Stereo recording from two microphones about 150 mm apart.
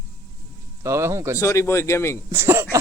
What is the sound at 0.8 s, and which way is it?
Speech, 20° right (ahead or behind).